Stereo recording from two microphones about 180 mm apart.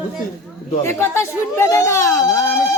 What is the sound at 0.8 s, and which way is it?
A woman's voice, 15° left (ahead or behind).